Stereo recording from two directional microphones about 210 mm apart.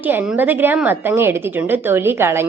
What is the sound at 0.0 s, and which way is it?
A woman's voice, 10° right (ahead or behind).